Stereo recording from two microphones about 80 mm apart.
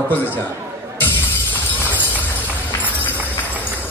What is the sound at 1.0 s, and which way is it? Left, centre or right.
Music, left.